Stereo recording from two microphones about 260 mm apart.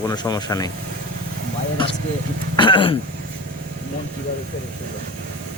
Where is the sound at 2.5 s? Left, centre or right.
Centre.